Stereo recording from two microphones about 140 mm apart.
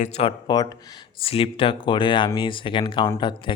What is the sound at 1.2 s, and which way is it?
Speech, 40° left (ahead or behind).